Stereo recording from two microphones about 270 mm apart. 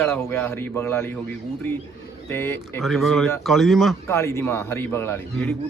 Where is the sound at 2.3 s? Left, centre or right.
Centre.